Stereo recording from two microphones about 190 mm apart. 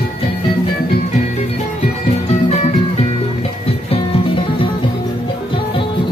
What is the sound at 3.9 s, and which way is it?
Music, 25° left (ahead or behind).